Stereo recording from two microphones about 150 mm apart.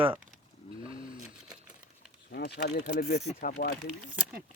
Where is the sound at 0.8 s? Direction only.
35° right (ahead or behind).